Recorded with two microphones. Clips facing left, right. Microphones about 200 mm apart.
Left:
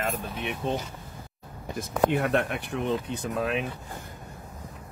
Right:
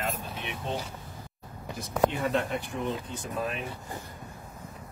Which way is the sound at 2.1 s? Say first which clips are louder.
Left 3 dB; 65° left (ahead or behind).